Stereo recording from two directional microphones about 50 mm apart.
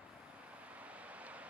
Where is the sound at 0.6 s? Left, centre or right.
Right.